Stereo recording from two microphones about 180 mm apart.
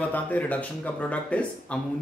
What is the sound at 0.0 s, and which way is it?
Speech, 10° left (ahead or behind).